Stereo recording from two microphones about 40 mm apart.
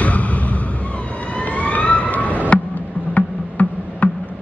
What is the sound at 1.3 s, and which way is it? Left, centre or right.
Emergency vehicle, left.